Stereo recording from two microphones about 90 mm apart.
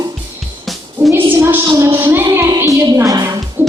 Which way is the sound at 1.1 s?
25° right (ahead or behind).